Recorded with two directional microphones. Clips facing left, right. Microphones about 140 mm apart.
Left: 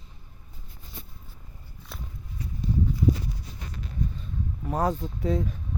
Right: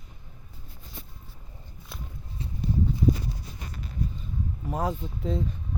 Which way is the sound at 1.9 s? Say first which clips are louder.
Left 1 dB; centre (ahead or behind).